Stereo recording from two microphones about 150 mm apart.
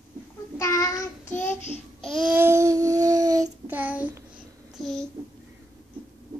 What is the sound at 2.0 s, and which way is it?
Babbling, centre (ahead or behind).